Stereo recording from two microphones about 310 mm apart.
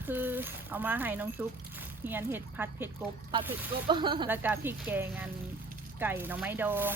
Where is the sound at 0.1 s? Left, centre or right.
Centre.